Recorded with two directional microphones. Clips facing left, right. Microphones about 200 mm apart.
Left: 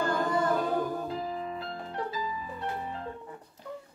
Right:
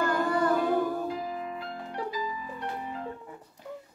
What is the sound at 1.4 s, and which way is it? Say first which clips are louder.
Music: even; 30° left (ahead or behind).